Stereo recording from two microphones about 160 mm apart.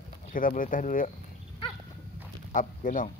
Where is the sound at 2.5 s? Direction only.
55° left (ahead or behind).